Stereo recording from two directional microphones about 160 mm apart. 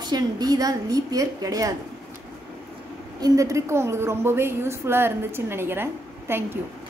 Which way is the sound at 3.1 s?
20° right (ahead or behind).